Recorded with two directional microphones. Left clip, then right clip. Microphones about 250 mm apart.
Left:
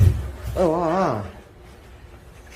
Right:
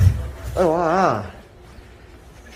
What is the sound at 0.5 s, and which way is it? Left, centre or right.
Speech, centre.